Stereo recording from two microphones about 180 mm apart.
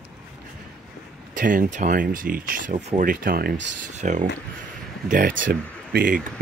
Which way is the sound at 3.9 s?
40° right (ahead or behind).